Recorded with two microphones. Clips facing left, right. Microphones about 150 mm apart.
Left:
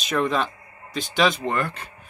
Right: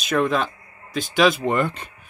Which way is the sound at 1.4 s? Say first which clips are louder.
Right 4 dB; 20° right (ahead or behind).